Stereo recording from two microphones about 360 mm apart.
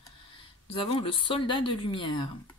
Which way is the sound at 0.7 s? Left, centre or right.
Centre.